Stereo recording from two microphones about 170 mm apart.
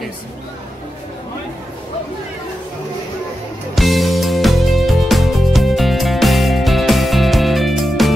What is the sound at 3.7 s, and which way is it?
Music, centre (ahead or behind).